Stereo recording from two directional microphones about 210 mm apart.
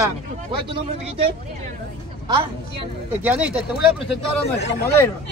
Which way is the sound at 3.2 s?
10° right (ahead or behind).